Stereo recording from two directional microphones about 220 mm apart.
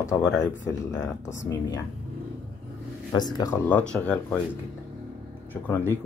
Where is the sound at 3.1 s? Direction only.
20° left (ahead or behind).